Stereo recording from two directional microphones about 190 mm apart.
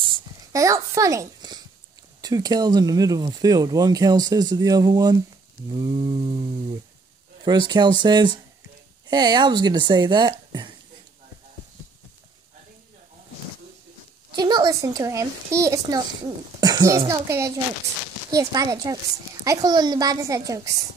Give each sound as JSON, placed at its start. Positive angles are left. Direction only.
{"t": 0.0, "sound": "a sound", "side_deg": -20}
{"t": 2.2, "sound": "speech", "side_deg": -20}
{"t": 7.4, "sound": "speech", "side_deg": -20}
{"t": 14.3, "sound": "a child's voice", "side_deg": -20}